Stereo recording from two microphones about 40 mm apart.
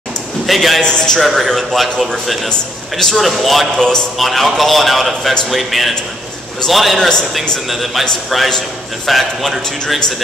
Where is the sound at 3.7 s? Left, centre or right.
Centre.